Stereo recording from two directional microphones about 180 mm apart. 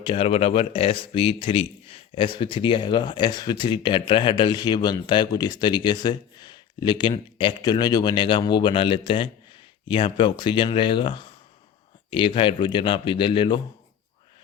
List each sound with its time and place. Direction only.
0.0 s speech: 30° left (ahead or behind)